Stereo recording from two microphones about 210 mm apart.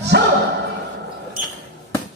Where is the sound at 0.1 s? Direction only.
50° right (ahead or behind).